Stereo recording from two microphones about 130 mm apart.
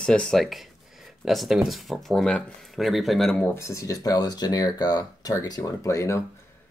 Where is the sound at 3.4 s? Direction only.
20° left (ahead or behind).